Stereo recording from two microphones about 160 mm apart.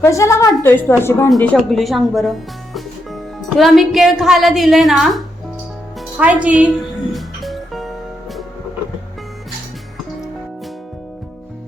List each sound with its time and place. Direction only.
0.0 s a woman's voice: 20° left (ahead or behind); by 2.3 s centre (ahead or behind)
3.6 s a woman's voice: centre (ahead or behind)
7.1 s music: centre (ahead or behind)